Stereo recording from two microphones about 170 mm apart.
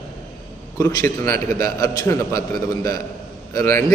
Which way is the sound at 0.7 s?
15° left (ahead or behind).